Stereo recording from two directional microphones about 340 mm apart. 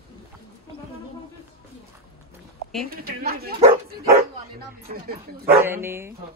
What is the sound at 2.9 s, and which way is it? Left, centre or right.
Speech, right.